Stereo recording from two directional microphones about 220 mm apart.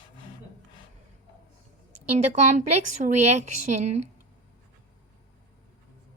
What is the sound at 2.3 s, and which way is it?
A woman's voice, 35° right (ahead or behind).